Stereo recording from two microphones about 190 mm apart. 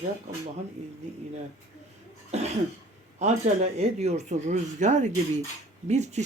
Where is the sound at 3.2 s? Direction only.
35° right (ahead or behind).